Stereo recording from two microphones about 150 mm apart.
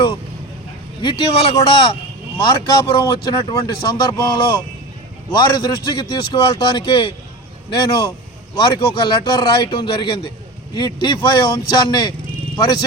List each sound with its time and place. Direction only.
1.5 s a man's voice: 30° left (ahead or behind)